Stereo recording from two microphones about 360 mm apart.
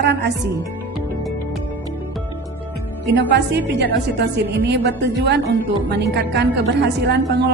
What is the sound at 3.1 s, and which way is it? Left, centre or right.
A woman's voice, right.